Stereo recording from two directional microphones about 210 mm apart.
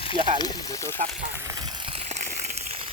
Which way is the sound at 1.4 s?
15° right (ahead or behind).